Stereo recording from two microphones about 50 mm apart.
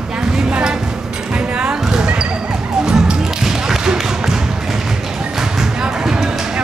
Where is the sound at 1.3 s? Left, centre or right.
Right.